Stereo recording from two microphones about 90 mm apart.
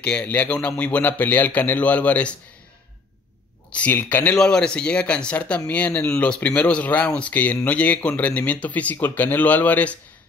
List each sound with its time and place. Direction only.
0.0 s speech: 15° left (ahead or behind)
3.7 s speech: 20° left (ahead or behind)
4.4 s speech: 10° left (ahead or behind)